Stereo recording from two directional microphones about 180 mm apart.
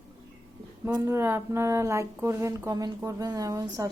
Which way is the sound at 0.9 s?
15° right (ahead or behind).